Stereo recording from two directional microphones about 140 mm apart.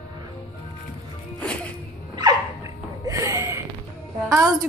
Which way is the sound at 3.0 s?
25° right (ahead or behind).